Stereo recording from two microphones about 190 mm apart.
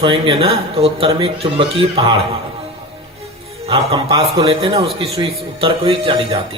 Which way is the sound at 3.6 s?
30° right (ahead or behind).